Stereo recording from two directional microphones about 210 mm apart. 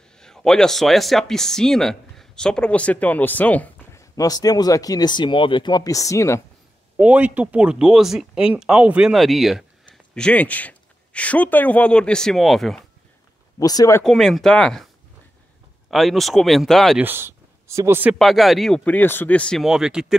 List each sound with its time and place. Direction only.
0.2 s speech: centre (ahead or behind)
7.0 s speech: 5° right (ahead or behind)
13.6 s speech: 15° left (ahead or behind)
14.0 s speech: centre (ahead or behind)
15.9 s speech: centre (ahead or behind)
17.0 s speech: 10° right (ahead or behind)
18.2 s speech: centre (ahead or behind)